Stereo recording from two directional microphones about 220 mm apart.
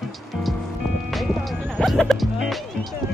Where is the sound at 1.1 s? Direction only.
Centre (ahead or behind).